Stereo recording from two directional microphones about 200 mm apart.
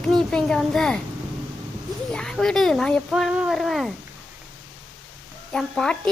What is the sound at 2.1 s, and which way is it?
Speech, 5° left (ahead or behind).